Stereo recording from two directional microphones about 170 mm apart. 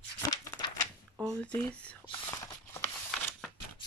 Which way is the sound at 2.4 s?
20° left (ahead or behind).